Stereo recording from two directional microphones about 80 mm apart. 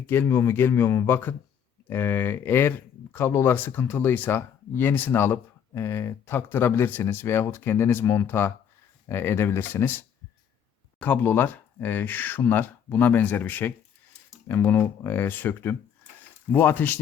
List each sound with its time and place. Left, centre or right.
0.0 s speech: left
11.0 s speech: left